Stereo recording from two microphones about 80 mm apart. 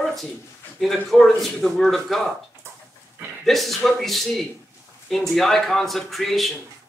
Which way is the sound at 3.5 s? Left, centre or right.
Centre.